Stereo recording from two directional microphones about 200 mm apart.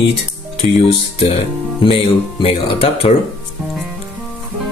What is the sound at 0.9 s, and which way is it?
Speech, 30° left (ahead or behind).